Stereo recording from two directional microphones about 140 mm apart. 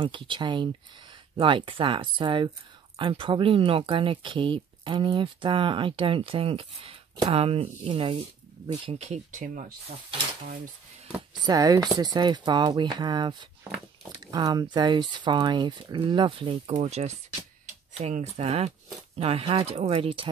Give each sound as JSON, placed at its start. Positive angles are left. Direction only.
{"t": 0.0, "sound": "speech", "side_deg": -35}
{"t": 8.8, "sound": "speech", "side_deg": -50}
{"t": 11.1, "sound": "speech", "side_deg": -25}
{"t": 18.1, "sound": "speech", "side_deg": -50}